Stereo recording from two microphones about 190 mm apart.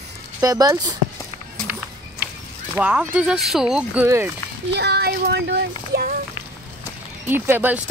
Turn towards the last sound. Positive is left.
turn(degrees=-10)  # may be behind; listen again after turning